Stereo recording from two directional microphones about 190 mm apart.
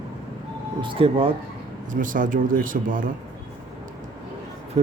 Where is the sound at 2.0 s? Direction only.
45° right (ahead or behind).